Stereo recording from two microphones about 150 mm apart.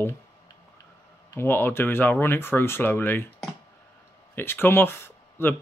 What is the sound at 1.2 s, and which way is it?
Speech, 15° left (ahead or behind).